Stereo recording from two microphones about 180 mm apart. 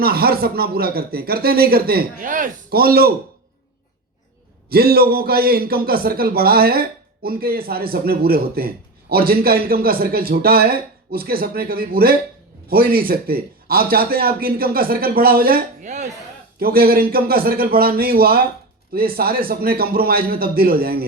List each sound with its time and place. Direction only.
0.0 s a man's voice: 55° right (ahead or behind)
4.7 s a man's voice: 55° right (ahead or behind); by 16.0 s 40° right (ahead or behind)
16.6 s a man's voice: 55° right (ahead or behind)